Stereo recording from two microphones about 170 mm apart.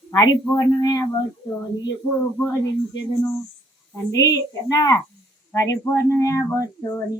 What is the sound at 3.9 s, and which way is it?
A woman's voice, 20° left (ahead or behind).